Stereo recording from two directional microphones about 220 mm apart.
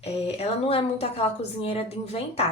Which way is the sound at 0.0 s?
25° left (ahead or behind).